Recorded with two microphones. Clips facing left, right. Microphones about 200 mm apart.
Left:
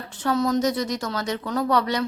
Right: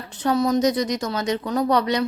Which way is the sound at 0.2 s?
15° right (ahead or behind).